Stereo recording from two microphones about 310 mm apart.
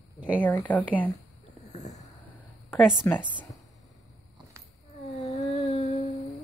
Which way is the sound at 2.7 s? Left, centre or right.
Centre.